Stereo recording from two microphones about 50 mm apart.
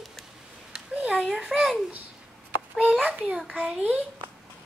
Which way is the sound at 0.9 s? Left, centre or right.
Right.